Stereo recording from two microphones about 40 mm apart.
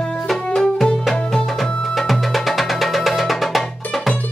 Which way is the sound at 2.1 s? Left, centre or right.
Centre.